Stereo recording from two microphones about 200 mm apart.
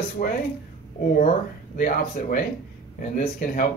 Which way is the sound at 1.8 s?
45° left (ahead or behind).